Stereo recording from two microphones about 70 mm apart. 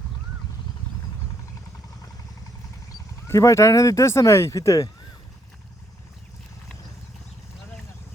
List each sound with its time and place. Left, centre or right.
3.2 s speech: left